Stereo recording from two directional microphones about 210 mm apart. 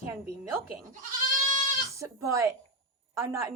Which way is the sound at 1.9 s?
15° right (ahead or behind).